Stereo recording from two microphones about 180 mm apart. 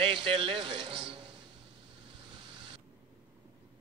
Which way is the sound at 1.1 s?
25° right (ahead or behind).